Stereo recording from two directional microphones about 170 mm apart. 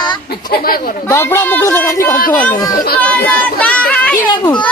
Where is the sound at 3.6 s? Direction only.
10° left (ahead or behind).